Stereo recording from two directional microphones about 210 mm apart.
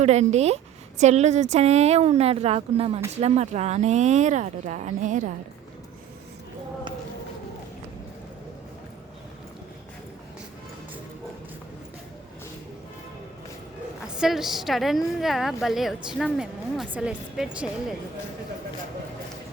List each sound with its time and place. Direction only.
0.0 s speech: 35° right (ahead or behind)
14.0 s a woman's voice: centre (ahead or behind)